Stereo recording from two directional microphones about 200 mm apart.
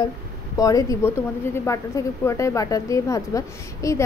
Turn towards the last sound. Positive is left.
turn(degrees=15)  # may be behind; listen again after turning